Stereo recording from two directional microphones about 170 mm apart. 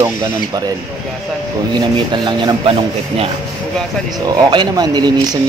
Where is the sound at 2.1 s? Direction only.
25° right (ahead or behind).